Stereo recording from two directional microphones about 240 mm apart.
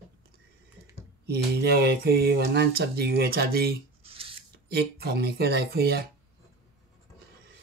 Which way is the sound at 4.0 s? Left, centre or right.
Right.